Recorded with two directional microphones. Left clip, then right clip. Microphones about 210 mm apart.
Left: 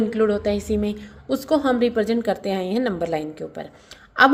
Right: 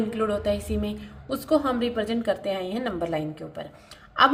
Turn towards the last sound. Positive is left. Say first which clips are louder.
# left 4 dB
turn(degrees=40)  # may be behind; listen again after turning